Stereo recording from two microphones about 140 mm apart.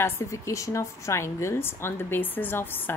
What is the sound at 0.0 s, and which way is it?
A woman's voice, 20° left (ahead or behind).